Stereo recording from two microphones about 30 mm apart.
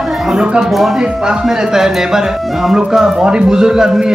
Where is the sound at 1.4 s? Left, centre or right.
Centre.